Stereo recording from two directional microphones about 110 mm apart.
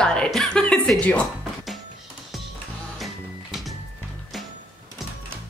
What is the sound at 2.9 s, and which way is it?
Music, centre (ahead or behind).